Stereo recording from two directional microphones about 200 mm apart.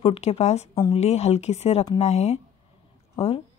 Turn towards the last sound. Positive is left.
turn(degrees=30)  # may be behind; listen again after turning